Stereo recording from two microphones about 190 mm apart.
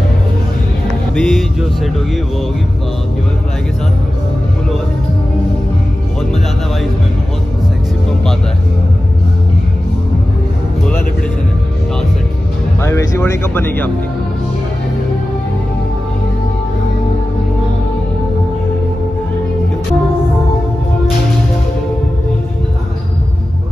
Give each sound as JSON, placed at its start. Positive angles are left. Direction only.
{"t": 1.1, "sound": "speech", "side_deg": 5}
{"t": 12.8, "sound": "speech", "side_deg": 15}